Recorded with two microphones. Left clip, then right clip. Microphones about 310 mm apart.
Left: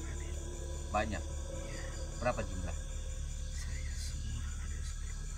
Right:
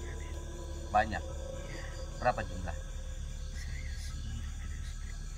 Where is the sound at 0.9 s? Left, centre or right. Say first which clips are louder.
Right 6 dB; centre.